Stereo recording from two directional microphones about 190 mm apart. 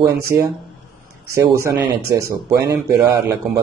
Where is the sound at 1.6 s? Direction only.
15° right (ahead or behind).